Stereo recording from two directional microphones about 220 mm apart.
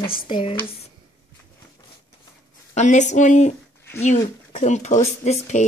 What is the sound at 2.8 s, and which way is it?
Speech, 35° left (ahead or behind).